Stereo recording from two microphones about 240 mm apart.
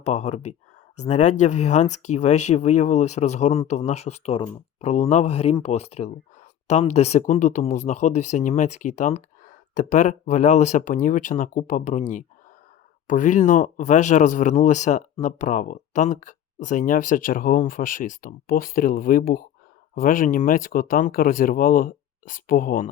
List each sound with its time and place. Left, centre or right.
0.0 s speech: left